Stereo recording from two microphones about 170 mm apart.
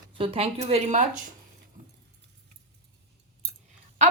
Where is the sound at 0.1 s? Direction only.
35° right (ahead or behind).